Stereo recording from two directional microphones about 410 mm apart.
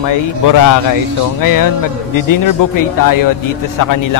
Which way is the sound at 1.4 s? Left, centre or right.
Left.